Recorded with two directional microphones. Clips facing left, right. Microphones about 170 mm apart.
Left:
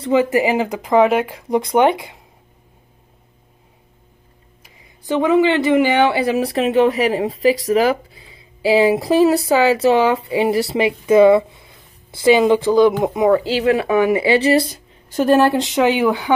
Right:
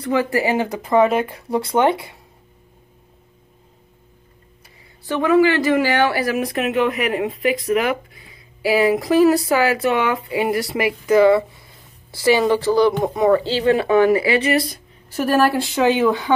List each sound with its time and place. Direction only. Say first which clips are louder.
0.0 s speech: left 4 dB; 20° left (ahead or behind)
4.6 s speech: left 4 dB; 20° left (ahead or behind)
13.6 s speech: even; 5° left (ahead or behind)
14.0 s speech: left 2 dB; 25° left (ahead or behind)